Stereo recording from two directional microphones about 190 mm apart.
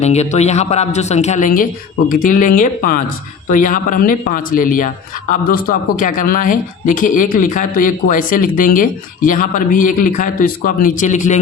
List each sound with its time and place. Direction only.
0.0 s speech: 35° left (ahead or behind)